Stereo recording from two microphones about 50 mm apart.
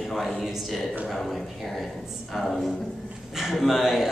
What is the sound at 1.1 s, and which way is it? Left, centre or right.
Speech, centre.